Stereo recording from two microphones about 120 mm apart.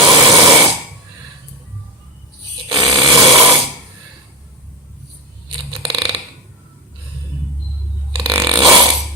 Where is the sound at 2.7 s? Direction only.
30° right (ahead or behind).